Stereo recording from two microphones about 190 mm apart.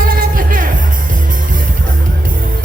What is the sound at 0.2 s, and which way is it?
Music, 45° right (ahead or behind).